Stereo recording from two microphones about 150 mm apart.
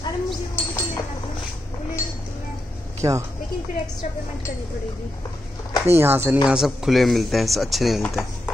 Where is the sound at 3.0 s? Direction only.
20° right (ahead or behind).